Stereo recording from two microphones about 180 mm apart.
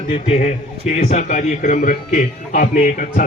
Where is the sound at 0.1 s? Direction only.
35° left (ahead or behind).